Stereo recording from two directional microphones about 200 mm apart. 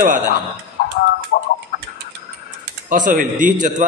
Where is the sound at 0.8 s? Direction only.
50° left (ahead or behind).